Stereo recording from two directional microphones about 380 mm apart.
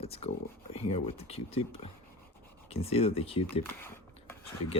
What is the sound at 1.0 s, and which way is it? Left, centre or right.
Speech, centre.